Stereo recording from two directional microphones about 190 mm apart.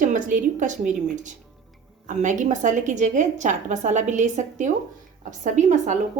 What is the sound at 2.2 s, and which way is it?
A woman's voice, 40° right (ahead or behind).